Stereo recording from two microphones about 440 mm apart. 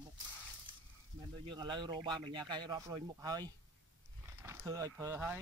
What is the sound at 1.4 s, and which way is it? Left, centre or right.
Speech, centre.